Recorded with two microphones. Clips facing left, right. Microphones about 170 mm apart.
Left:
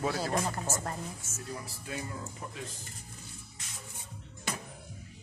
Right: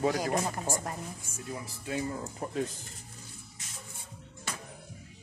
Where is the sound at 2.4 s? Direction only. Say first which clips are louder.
Right 6 dB; 45° right (ahead or behind).